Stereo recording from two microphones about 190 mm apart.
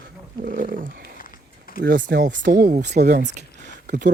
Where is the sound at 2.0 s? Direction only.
45° right (ahead or behind).